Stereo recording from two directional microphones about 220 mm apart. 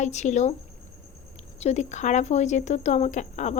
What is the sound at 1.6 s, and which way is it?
A woman's voice, 30° left (ahead or behind).